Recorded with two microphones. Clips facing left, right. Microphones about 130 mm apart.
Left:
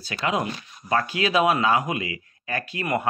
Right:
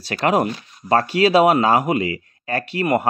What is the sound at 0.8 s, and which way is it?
Speech, 35° right (ahead or behind).